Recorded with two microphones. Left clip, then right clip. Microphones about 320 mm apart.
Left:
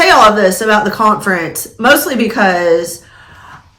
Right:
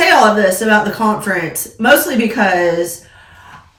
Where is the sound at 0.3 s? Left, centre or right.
Centre.